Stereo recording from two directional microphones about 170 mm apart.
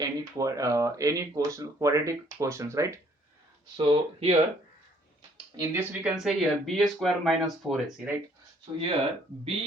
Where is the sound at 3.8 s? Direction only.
30° right (ahead or behind).